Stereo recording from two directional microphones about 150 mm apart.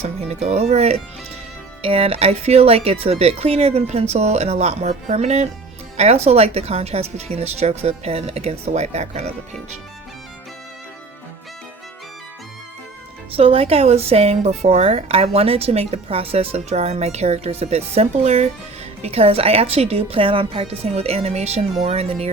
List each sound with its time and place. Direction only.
0.0 s a woman's voice: 45° right (ahead or behind)
13.3 s a woman's voice: 40° right (ahead or behind)